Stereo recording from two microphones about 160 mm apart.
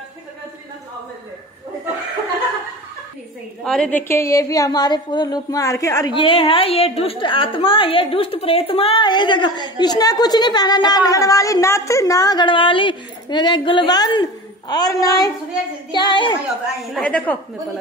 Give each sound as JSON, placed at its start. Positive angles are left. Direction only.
{"t": 3.6, "sound": "a woman's voice", "side_deg": 5}
{"t": 16.9, "sound": "a woman's voice", "side_deg": 5}